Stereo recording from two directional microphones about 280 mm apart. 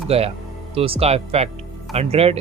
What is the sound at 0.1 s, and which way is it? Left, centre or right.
Speech, right.